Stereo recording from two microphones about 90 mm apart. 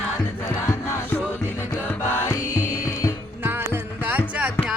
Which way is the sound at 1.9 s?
25° left (ahead or behind).